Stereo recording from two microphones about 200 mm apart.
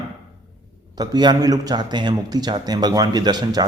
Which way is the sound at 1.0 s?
20° right (ahead or behind).